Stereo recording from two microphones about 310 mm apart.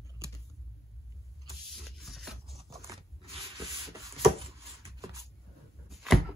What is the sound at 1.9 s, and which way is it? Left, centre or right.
Zipper, centre.